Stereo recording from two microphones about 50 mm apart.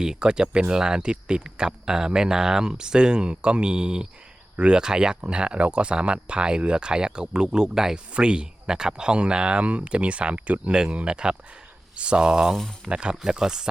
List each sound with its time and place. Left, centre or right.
0.0 s speech: centre
12.5 s speech: centre
12.9 s speech: centre